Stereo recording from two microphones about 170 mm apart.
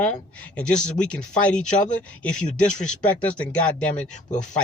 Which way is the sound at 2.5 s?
45° left (ahead or behind).